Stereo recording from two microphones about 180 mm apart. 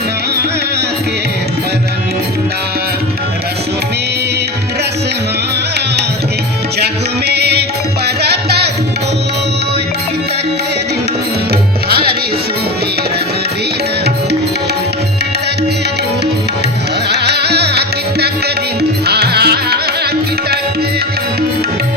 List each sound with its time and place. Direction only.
6.7 s music: 65° right (ahead or behind)
17.1 s music: 65° right (ahead or behind)